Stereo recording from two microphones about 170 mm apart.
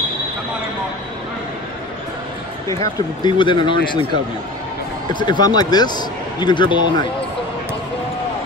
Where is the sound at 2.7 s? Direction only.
20° left (ahead or behind).